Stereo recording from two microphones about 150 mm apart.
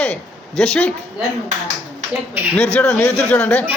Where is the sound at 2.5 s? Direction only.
15° left (ahead or behind).